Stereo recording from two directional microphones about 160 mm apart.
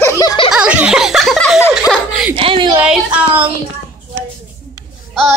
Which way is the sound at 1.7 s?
Centre (ahead or behind).